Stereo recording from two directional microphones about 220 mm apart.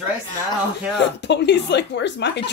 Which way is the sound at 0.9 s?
50° left (ahead or behind).